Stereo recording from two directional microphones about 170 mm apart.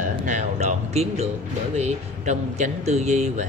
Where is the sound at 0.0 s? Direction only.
50° right (ahead or behind).